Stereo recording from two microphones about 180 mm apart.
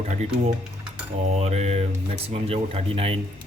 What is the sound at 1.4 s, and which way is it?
Speech, 35° right (ahead or behind).